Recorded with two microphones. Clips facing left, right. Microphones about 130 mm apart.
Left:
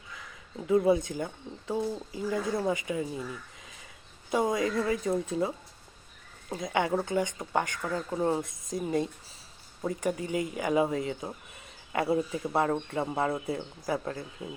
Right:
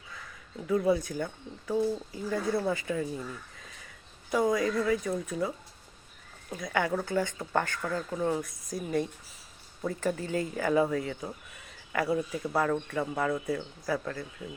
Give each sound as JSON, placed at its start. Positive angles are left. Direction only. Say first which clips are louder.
{"t": 0.7, "sound": "speech", "louder": "left 2 dB", "side_deg": 20}
{"t": 4.3, "sound": "speech", "louder": "right 1 dB", "side_deg": 25}
{"t": 7.9, "sound": "speech", "louder": "left 2 dB", "side_deg": 25}